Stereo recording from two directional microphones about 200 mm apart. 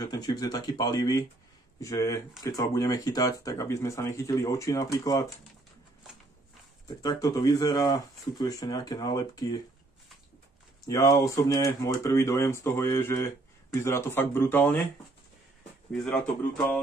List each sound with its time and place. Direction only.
0.0 s speech: 20° left (ahead or behind)
7.0 s speech: 20° left (ahead or behind)
10.9 s speech: 20° left (ahead or behind)
15.9 s speech: 5° left (ahead or behind)